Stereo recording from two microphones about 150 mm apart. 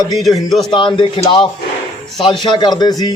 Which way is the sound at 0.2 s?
Centre (ahead or behind).